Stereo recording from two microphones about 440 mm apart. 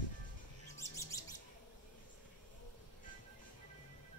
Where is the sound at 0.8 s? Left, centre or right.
Centre.